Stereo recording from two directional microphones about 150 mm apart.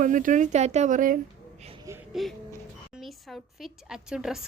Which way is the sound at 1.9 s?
20° right (ahead or behind).